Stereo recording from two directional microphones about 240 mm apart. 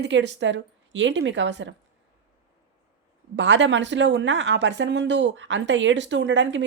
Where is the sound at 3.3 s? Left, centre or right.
Right.